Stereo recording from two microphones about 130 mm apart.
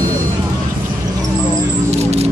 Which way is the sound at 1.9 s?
55° right (ahead or behind).